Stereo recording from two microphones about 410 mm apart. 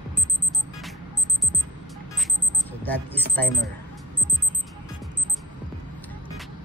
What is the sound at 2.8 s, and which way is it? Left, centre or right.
Speech, centre.